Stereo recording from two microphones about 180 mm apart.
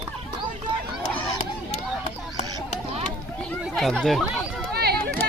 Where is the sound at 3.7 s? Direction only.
Centre (ahead or behind).